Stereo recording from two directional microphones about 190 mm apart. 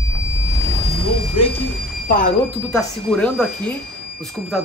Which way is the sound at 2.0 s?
45° left (ahead or behind).